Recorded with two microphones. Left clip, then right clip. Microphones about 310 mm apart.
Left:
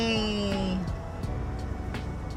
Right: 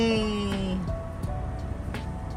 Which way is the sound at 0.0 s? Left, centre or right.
Centre.